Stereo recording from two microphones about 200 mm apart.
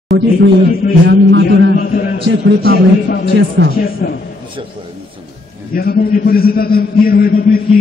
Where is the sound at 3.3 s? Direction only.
60° right (ahead or behind).